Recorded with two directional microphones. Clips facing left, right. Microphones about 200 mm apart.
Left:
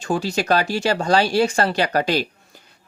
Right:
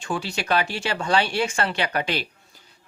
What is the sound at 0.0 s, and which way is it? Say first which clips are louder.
Speech: left 6 dB; 40° left (ahead or behind).